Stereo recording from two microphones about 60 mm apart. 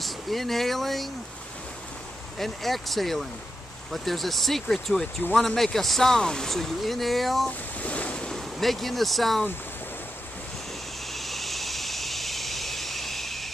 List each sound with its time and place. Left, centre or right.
0.0 s speech: centre
2.3 s speech: centre
7.4 s waves: left
8.3 s speech: centre
11.1 s vehicle: centre